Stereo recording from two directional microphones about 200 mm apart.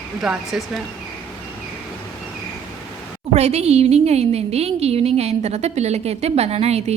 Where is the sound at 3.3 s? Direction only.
35° right (ahead or behind).